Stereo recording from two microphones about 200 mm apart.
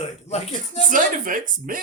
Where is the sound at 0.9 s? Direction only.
40° right (ahead or behind).